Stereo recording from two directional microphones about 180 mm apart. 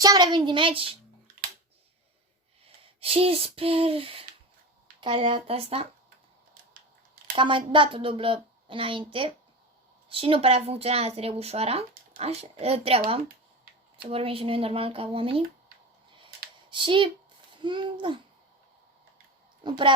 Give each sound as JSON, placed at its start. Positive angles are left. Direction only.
{"t": 0.0, "sound": "speech", "side_deg": -25}
{"t": 2.6, "sound": "speech", "side_deg": -30}
{"t": 7.3, "sound": "speech", "side_deg": -30}
{"t": 10.1, "sound": "speech", "side_deg": -30}
{"t": 14.1, "sound": "speech", "side_deg": -30}
{"t": 16.6, "sound": "a child's voice", "side_deg": -25}
{"t": 19.6, "sound": "speech", "side_deg": -25}